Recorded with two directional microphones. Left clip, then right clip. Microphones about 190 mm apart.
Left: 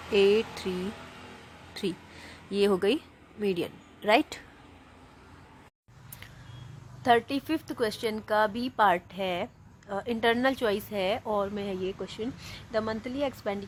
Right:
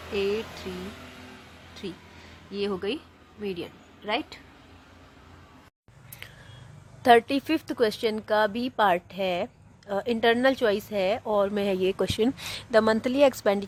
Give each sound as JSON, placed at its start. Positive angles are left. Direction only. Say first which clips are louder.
{"t": 0.1, "sound": "speech", "louder": "left 5 dB", "side_deg": 40}
{"t": 2.5, "sound": "a woman's voice", "louder": "left 5 dB", "side_deg": 40}
{"t": 7.0, "sound": "a woman's voice", "louder": "right 5 dB", "side_deg": -25}
{"t": 11.5, "sound": "speech", "louder": "right 8 dB", "side_deg": -35}